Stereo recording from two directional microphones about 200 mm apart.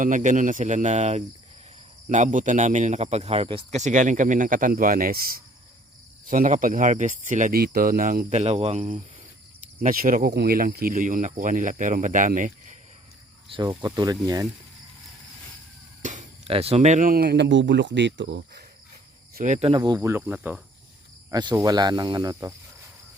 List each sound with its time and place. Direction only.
0.0 s speech: 40° right (ahead or behind)
6.2 s speech: 40° right (ahead or behind)
13.5 s speech: 20° right (ahead or behind)
16.0 s speech: 35° right (ahead or behind); by 18.6 s 60° right (ahead or behind)
19.3 s speech: 40° right (ahead or behind); by 22.5 s 15° right (ahead or behind)